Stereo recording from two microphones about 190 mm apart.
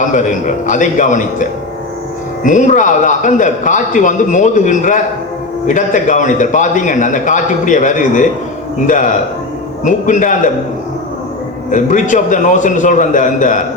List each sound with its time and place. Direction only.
0.0 s a man's voice: 40° left (ahead or behind)
11.7 s a man's voice: 40° left (ahead or behind)